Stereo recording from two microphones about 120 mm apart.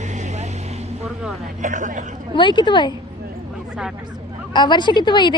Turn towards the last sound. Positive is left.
turn(degrees=40)  # may be behind; listen again after turning